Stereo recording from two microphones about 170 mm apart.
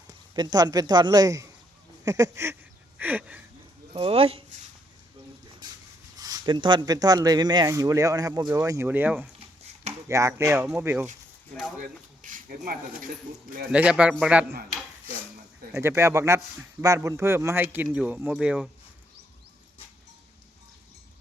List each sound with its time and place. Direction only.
0.3 s speech: 25° right (ahead or behind)
3.9 s speech: 35° right (ahead or behind)
6.1 s speech: 20° right (ahead or behind)
11.8 s speech: 50° right (ahead or behind)
13.7 s speech: 5° right (ahead or behind)
15.7 s speech: 15° right (ahead or behind)